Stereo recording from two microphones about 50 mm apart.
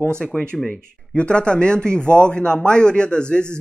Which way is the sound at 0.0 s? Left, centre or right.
Centre.